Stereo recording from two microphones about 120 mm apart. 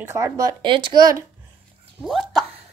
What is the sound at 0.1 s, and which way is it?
Speech, 30° right (ahead or behind).